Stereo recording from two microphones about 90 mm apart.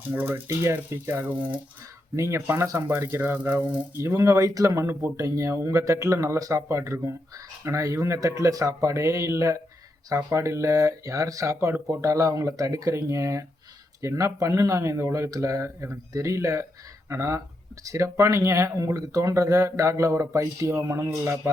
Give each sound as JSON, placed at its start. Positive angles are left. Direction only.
{"t": 0.1, "sound": "speech", "side_deg": -20}
{"t": 2.1, "sound": "speech", "side_deg": -30}
{"t": 4.1, "sound": "speech", "side_deg": -40}